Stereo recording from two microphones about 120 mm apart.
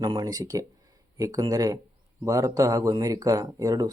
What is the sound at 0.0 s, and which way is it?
Speech, 35° right (ahead or behind).